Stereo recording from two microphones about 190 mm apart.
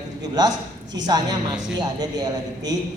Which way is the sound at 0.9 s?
20° right (ahead or behind).